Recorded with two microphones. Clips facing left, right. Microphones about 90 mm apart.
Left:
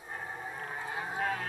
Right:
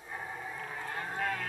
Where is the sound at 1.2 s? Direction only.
35° left (ahead or behind).